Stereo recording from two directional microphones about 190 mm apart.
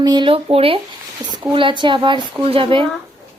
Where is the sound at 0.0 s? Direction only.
20° right (ahead or behind).